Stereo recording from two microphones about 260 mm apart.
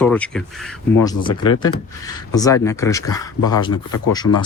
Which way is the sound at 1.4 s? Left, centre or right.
Centre.